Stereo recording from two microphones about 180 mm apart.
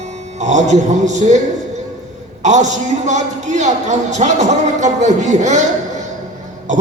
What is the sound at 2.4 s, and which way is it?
A man's voice, 40° right (ahead or behind).